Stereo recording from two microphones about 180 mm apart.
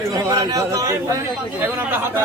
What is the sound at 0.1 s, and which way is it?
Speech, 20° right (ahead or behind).